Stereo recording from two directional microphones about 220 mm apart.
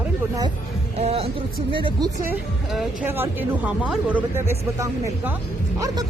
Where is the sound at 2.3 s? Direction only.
5° right (ahead or behind).